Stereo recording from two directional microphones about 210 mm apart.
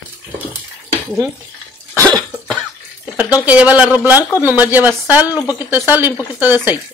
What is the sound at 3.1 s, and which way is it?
Speech, 5° right (ahead or behind).